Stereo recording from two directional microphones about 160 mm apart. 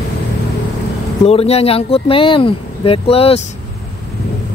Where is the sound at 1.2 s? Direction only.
40° left (ahead or behind).